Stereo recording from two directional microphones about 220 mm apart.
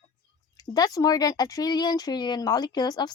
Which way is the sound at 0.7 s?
15° left (ahead or behind).